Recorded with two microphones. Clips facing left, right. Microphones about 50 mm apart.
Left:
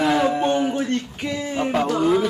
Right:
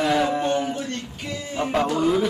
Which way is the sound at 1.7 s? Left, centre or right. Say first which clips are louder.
Left 1 dB; centre.